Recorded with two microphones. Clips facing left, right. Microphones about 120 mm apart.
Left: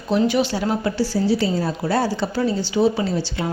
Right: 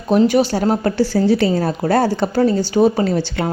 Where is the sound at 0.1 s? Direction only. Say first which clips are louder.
Right 5 dB; 45° right (ahead or behind).